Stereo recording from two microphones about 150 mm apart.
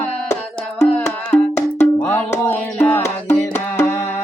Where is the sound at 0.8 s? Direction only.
15° left (ahead or behind).